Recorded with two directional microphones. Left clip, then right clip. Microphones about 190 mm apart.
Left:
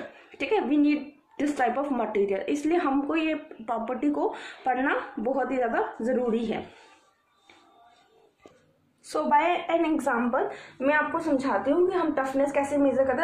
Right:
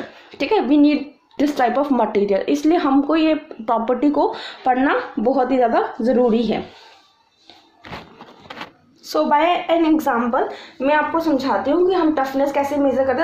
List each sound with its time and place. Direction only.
0.3 s a woman's voice: 40° right (ahead or behind)
9.1 s a woman's voice: 30° right (ahead or behind)